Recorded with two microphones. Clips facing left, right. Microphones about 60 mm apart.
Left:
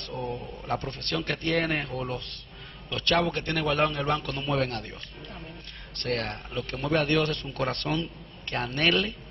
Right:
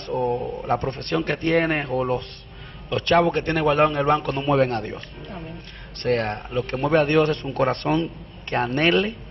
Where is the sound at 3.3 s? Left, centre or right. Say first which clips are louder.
Right 7 dB; right.